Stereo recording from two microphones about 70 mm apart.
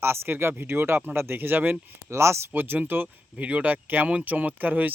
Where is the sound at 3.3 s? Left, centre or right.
Centre.